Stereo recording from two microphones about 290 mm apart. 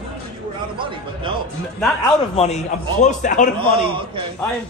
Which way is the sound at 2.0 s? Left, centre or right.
Left.